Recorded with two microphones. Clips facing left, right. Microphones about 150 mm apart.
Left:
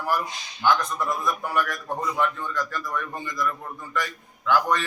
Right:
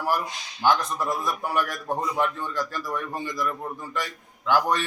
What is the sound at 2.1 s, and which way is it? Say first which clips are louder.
Speech: even; 30° right (ahead or behind).